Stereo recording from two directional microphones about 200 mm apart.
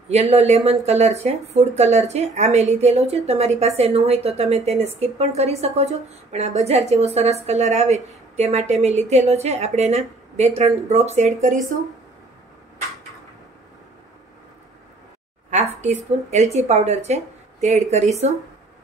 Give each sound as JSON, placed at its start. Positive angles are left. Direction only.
{"t": 0.1, "sound": "speech", "side_deg": -35}
{"t": 15.5, "sound": "speech", "side_deg": -35}